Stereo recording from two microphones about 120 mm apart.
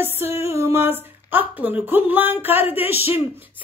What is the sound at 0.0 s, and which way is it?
Speech, 20° right (ahead or behind).